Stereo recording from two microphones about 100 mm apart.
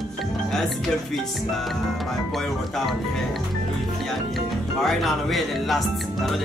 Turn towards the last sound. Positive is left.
turn(degrees=0)  # may be behind; listen again after turning